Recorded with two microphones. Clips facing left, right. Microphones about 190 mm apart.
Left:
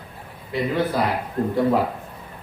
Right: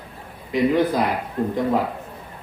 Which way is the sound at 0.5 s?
15° right (ahead or behind).